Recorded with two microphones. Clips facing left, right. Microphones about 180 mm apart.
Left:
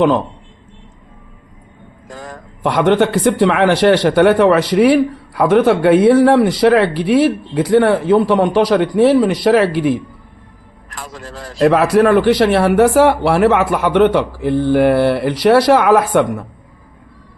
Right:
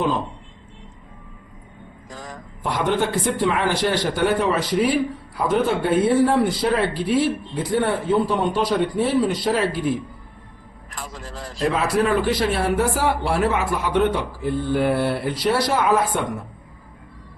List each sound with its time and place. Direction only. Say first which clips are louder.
2.0 s a man's voice: left 5 dB; 60° left (ahead or behind)